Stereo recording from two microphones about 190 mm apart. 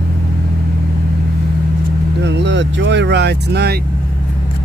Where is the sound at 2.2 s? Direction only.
70° right (ahead or behind).